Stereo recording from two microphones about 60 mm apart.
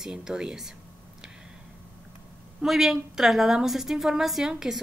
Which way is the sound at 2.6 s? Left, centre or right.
Centre.